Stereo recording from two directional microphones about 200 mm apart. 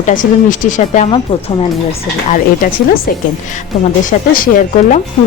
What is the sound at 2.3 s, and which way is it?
Speech, 45° left (ahead or behind).